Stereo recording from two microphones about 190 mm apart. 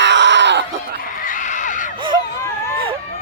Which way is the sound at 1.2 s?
40° left (ahead or behind).